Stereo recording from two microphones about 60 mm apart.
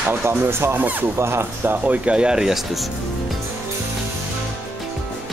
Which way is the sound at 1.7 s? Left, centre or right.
Right.